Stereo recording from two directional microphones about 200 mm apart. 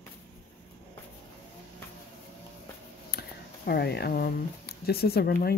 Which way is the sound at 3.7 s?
55° left (ahead or behind).